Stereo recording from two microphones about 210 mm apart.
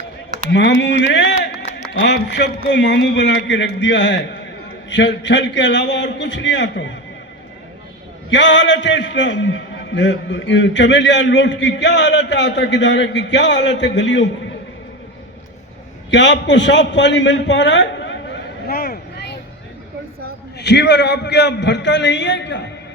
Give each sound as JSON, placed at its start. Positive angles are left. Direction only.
{"t": 0.5, "sound": "a man's voice", "side_deg": 55}
{"t": 8.3, "sound": "a man's voice", "side_deg": 60}
{"t": 16.0, "sound": "a man's voice", "side_deg": 60}
{"t": 18.7, "sound": "vehicle", "side_deg": 45}
{"t": 20.6, "sound": "a man's voice", "side_deg": 55}